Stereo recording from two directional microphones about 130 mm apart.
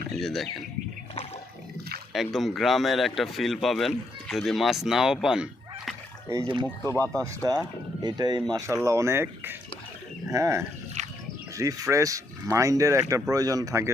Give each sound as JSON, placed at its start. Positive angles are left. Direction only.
{"t": 0.1, "sound": "speech", "side_deg": 0}
{"t": 2.1, "sound": "speech", "side_deg": 0}
{"t": 7.0, "sound": "speech", "side_deg": 10}
{"t": 8.0, "sound": "speech", "side_deg": -30}
{"t": 8.6, "sound": "speech", "side_deg": -20}
{"t": 11.0, "sound": "a sound", "side_deg": -65}
{"t": 11.5, "sound": "speech", "side_deg": -25}